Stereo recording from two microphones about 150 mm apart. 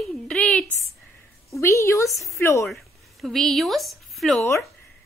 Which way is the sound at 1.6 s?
20° left (ahead or behind).